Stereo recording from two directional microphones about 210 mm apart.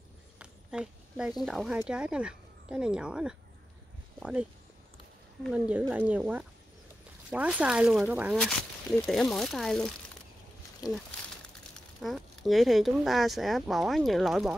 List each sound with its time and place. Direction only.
0.4 s a sound: 5° right (ahead or behind)
1.4 s speech: centre (ahead or behind)
10.8 s speech: 15° left (ahead or behind)
12.0 s speech: centre (ahead or behind)